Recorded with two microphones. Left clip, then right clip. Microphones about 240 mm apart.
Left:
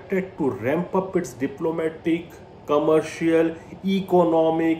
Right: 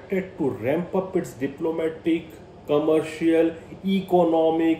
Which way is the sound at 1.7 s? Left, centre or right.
Centre.